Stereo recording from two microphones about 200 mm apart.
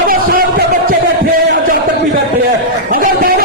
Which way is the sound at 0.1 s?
45° right (ahead or behind).